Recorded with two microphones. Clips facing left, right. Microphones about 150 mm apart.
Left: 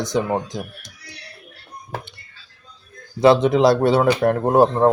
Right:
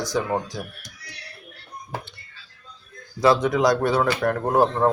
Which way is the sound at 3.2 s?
25° left (ahead or behind).